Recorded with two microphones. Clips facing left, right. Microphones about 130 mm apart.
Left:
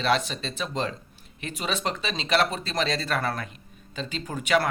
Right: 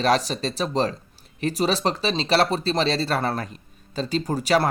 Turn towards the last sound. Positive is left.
turn(degrees=-35)  # may be behind; listen again after turning